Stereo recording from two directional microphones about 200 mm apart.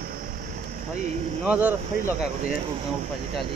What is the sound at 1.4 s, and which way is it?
Speech, 5° right (ahead or behind).